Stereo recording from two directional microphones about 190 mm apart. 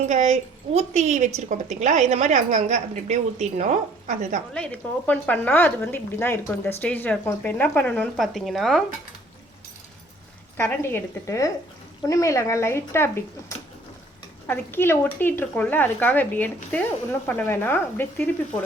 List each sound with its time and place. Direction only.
0.0 s a woman's voice: 40° right (ahead or behind)
4.5 s speech: 5° left (ahead or behind)
10.6 s speech: 10° left (ahead or behind)
14.4 s speech: 10° left (ahead or behind)